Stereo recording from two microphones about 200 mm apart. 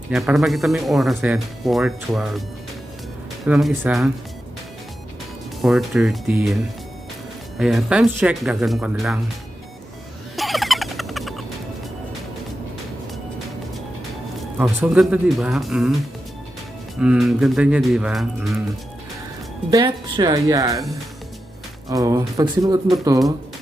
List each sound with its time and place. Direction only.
0.1 s speech: centre (ahead or behind)
3.4 s speech: centre (ahead or behind)
5.6 s speech: centre (ahead or behind)
7.6 s speech: centre (ahead or behind)
10.3 s a sound: centre (ahead or behind)
14.6 s speech: 5° right (ahead or behind)
17.0 s speech: 5° right (ahead or behind)
19.7 s speech: 20° right (ahead or behind)
21.8 s speech: 15° right (ahead or behind)